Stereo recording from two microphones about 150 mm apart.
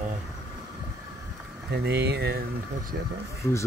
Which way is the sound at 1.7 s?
90° right.